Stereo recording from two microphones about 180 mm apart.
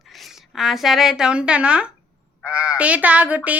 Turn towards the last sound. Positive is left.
turn(degrees=-10)  # may be behind; listen again after turning